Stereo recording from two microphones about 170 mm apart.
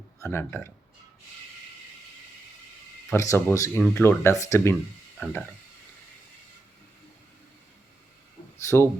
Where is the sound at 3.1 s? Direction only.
15° left (ahead or behind).